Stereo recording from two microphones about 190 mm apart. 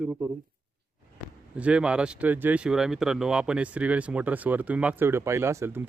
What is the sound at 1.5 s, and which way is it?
Speech, 5° right (ahead or behind).